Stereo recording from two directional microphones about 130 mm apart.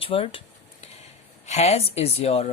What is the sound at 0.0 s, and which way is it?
Speech, 45° left (ahead or behind).